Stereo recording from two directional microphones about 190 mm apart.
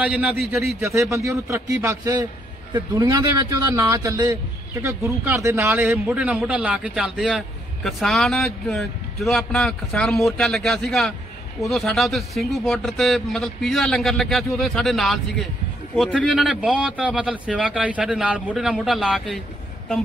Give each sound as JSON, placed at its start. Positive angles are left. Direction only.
{"t": 0.0, "sound": "a man's voice", "side_deg": -5}